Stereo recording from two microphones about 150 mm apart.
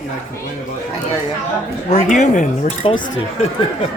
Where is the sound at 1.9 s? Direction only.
55° left (ahead or behind).